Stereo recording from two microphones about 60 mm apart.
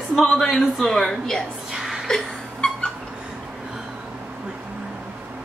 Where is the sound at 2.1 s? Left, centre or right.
Centre.